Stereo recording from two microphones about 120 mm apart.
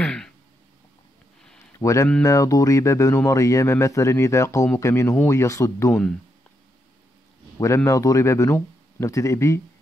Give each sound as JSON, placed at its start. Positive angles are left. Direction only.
{"t": 0.0, "sound": "a sound", "side_deg": 5}
{"t": 1.8, "sound": "speech", "side_deg": 25}
{"t": 7.5, "sound": "speech", "side_deg": 25}